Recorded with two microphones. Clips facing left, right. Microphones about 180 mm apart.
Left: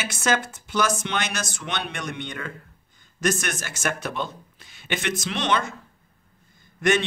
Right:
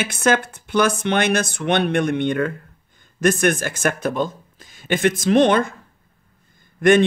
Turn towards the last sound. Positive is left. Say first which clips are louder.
# right 8 dB
turn(degrees=-55)  # may be behind; listen again after turning